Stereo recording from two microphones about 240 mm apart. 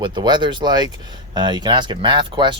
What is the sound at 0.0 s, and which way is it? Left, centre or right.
Speech, centre.